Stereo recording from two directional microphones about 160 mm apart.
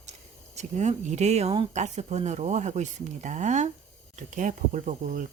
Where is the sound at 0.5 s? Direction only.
45° right (ahead or behind).